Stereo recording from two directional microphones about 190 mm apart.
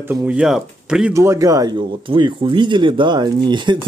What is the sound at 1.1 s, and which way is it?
Speech, 15° right (ahead or behind).